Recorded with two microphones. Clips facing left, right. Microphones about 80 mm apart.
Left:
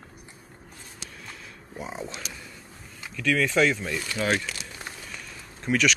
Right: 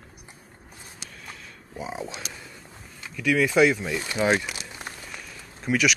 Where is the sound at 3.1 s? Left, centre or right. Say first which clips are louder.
Right 2 dB; centre.